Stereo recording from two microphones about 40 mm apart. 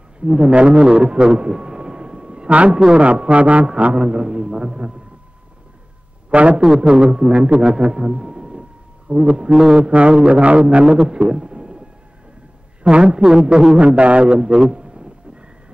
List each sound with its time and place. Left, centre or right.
0.2 s a man's voice: right
6.3 s a man's voice: right
6.6 s a man's voice: centre
13.0 s a man's voice: centre
13.7 s a man's voice: right